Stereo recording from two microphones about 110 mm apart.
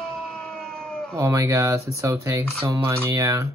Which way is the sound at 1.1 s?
30° right (ahead or behind).